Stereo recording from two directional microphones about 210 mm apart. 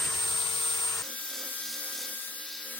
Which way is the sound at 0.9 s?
Centre (ahead or behind).